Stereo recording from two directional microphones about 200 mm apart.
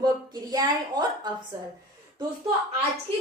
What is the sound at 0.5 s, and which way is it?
Speech, 20° right (ahead or behind).